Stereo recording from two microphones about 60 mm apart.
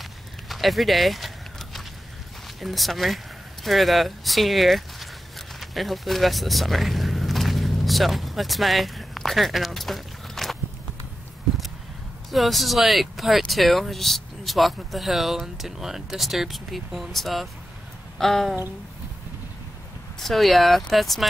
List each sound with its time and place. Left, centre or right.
0.0 s a sound: centre
2.6 s speech: centre
5.6 s vehicle: centre
12.3 s speech: centre
18.1 s a sound: centre
20.2 s speech: centre